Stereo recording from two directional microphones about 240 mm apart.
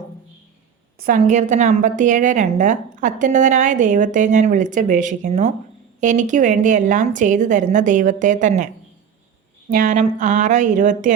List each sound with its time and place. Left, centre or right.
0.9 s a woman's voice: right